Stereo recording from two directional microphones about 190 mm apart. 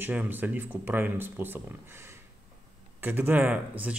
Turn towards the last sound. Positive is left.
turn(degrees=-5)  # may be behind; listen again after turning